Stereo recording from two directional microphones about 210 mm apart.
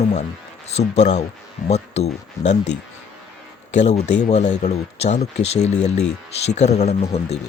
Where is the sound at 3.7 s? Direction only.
30° left (ahead or behind).